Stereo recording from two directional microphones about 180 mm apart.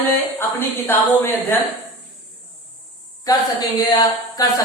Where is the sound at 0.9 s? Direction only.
10° left (ahead or behind).